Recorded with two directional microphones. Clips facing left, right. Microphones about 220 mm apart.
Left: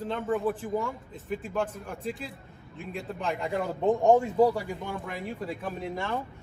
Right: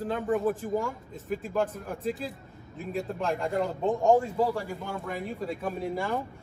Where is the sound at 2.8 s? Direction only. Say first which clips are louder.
Right 5 dB; 40° right (ahead or behind).